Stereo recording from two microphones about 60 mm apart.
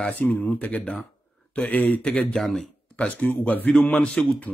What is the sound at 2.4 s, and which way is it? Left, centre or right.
Speech, centre.